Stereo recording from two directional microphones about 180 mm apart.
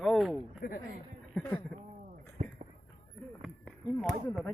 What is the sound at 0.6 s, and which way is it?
Speech, 65° left (ahead or behind).